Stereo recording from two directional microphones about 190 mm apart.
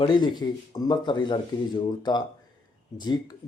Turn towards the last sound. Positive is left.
turn(degrees=20)  # may be behind; listen again after turning